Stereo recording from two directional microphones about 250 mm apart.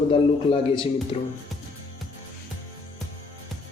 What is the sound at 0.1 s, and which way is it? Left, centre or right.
Speech, left.